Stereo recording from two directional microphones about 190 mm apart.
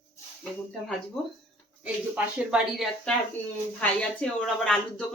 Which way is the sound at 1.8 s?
5° right (ahead or behind).